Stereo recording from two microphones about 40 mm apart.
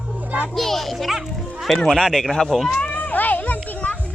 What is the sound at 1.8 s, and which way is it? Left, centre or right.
Speech, centre.